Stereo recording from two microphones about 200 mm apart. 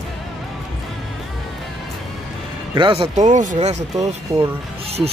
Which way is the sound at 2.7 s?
25° right (ahead or behind).